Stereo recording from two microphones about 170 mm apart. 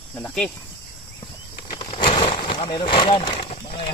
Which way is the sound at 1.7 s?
25° left (ahead or behind).